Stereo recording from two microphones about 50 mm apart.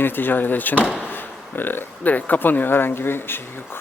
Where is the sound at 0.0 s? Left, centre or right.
Left.